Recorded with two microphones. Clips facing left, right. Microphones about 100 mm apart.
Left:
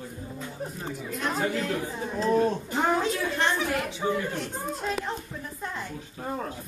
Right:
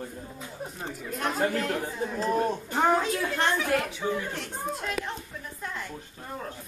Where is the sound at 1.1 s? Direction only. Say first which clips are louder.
Right 1 dB; 50° right (ahead or behind).